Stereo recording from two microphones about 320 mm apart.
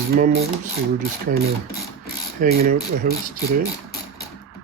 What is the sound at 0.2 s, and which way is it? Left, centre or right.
Speech, right.